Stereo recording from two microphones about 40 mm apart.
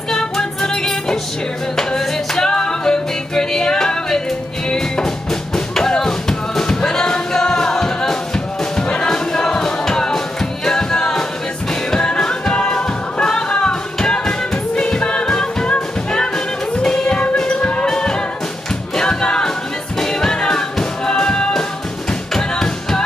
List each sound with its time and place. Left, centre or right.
0.1 s music: centre
16.7 s music: centre
17.0 s music: left
17.8 s music: centre
18.9 s choir: centre
20.0 s music: centre